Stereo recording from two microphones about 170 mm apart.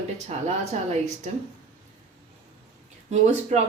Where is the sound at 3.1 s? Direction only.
40° right (ahead or behind).